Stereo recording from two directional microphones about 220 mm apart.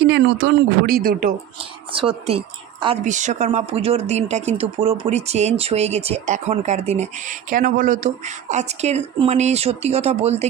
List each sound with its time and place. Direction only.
0.0 s speech: 50° right (ahead or behind)
1.9 s speech: 25° right (ahead or behind)